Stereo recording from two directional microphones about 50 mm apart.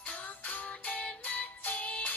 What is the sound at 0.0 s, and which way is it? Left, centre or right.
Music, left.